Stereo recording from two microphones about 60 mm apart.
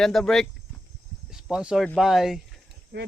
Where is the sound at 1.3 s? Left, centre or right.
Centre.